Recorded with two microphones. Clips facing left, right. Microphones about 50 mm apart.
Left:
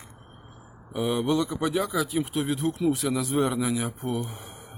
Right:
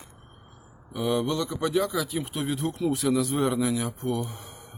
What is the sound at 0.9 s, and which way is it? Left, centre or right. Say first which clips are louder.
Speech: left 1 dB; centre.